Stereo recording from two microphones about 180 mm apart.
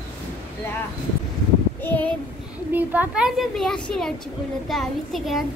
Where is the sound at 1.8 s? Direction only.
10° left (ahead or behind).